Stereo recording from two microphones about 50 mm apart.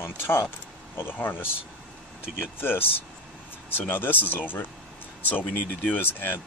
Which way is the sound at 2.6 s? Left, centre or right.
Left.